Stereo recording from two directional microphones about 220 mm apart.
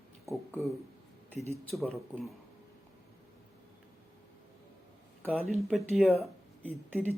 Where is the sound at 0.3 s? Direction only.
15° right (ahead or behind).